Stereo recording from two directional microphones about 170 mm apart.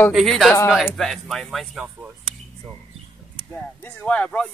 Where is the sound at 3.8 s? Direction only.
10° left (ahead or behind).